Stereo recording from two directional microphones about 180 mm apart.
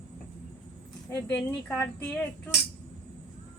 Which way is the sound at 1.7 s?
5° left (ahead or behind).